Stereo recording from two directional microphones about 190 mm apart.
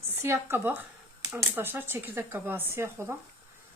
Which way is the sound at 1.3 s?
10° right (ahead or behind).